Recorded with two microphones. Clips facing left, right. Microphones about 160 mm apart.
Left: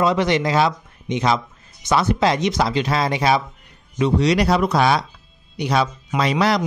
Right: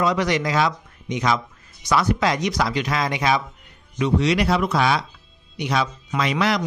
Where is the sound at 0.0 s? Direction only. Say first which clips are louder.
Left 3 dB; 25° left (ahead or behind).